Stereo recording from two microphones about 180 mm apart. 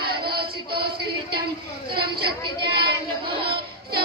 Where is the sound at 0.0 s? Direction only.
60° right (ahead or behind).